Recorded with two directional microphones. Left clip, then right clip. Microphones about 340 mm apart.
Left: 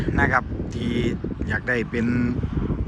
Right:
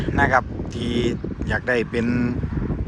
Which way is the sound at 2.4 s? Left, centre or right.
Right.